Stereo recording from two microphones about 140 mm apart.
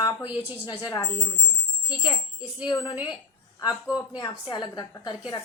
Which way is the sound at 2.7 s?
35° left (ahead or behind).